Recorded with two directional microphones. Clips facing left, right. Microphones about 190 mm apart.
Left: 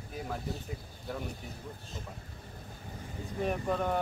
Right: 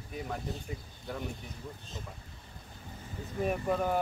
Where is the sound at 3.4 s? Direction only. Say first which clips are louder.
Right 1 dB; 5° right (ahead or behind).